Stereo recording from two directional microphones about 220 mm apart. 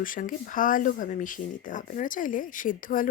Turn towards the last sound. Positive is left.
turn(degrees=40)  # may be behind; listen again after turning